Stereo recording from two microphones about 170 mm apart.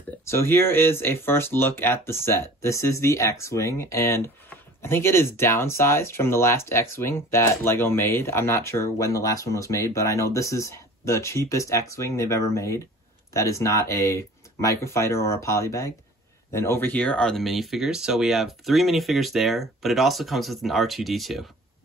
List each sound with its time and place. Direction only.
0.2 s speech: 15° left (ahead or behind); by 21.5 s centre (ahead or behind)